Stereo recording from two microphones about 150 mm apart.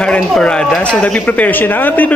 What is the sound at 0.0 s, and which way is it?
A man's voice, 5° left (ahead or behind).